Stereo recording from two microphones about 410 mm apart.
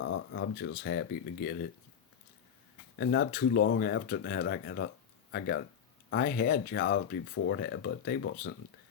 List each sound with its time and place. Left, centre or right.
0.0 s speech: left
3.0 s speech: left